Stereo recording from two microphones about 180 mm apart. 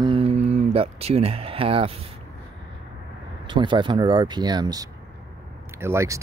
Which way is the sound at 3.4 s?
25° right (ahead or behind).